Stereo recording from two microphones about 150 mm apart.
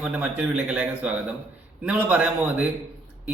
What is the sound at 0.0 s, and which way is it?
A man's voice, 10° right (ahead or behind).